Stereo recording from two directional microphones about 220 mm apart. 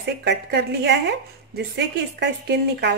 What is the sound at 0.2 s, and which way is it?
Speech, 50° right (ahead or behind).